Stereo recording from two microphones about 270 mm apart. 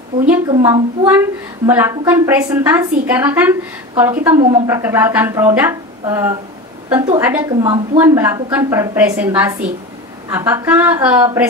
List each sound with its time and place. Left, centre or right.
0.5 s a woman's voice: centre
7.6 s a woman's voice: centre
8.0 s a woman's voice: centre